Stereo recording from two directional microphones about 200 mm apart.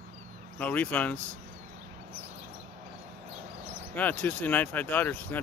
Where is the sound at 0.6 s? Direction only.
5° left (ahead or behind).